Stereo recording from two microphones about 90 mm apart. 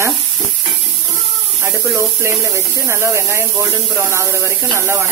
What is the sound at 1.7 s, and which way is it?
Speech, 35° right (ahead or behind).